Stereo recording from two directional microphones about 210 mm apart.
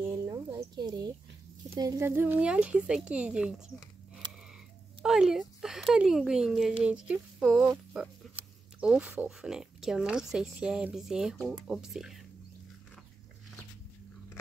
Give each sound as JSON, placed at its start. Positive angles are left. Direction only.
{"t": 0.1, "sound": "a sound", "side_deg": -15}
{"t": 1.8, "sound": "speech", "side_deg": -15}
{"t": 5.0, "sound": "speech", "side_deg": 0}